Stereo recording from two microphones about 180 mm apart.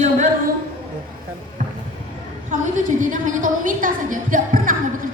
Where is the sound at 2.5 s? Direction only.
45° right (ahead or behind).